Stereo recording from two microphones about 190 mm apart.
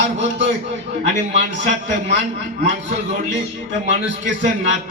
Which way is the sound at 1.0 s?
40° right (ahead or behind).